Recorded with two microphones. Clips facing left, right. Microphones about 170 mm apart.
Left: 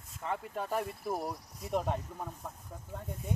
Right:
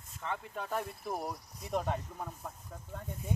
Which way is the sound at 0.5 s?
5° left (ahead or behind).